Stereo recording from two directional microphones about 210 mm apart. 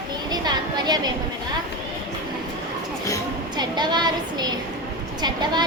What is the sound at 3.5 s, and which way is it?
A woman's voice, 20° right (ahead or behind).